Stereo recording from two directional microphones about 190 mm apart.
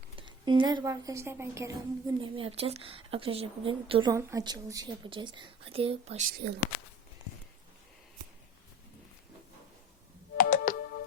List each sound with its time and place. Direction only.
0.2 s a woman's voice: 25° right (ahead or behind)
4.1 s a woman's voice: 15° right (ahead or behind); by 6.2 s 30° right (ahead or behind)
6.3 s speech: 60° right (ahead or behind)
10.3 s music: 45° left (ahead or behind)